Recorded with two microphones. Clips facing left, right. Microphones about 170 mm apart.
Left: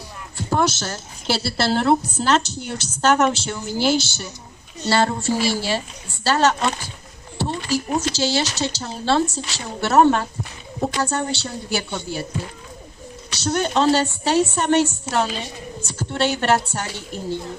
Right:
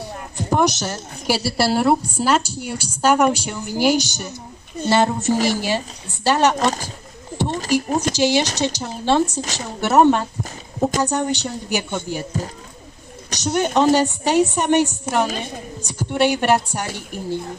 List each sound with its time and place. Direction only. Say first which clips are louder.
0.4 s a woman's voice: right 2 dB; 15° right (ahead or behind)
5.3 s a woman's voice: right 2 dB; 45° right (ahead or behind)
5.6 s a woman's voice: right 2 dB; 15° right (ahead or behind)
6.6 s speech: right 3 dB; 40° right (ahead or behind)
7.7 s a woman's voice: right 3 dB; 15° right (ahead or behind)
13.4 s a woman's voice: right 2 dB; 15° right (ahead or behind)
15.2 s a woman's voice: right 3 dB; 50° right (ahead or behind)
15.8 s a woman's voice: right 4 dB; 15° right (ahead or behind)